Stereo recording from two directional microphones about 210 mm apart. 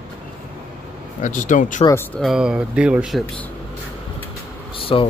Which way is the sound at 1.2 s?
35° left (ahead or behind).